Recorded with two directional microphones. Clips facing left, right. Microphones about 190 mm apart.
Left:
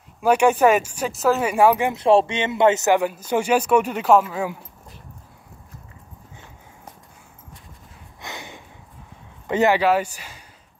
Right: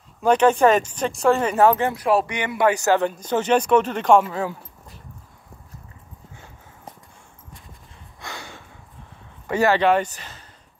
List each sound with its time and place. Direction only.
0.2 s speech: 10° left (ahead or behind)
2.0 s speech: 25° left (ahead or behind)
3.0 s speech: 10° left (ahead or behind)
8.2 s a sound: 20° left (ahead or behind)
9.5 s speech: 20° left (ahead or behind)
9.8 s speech: 5° left (ahead or behind)